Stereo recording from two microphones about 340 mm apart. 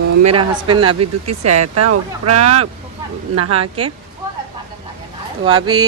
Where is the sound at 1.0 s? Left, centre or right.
Right.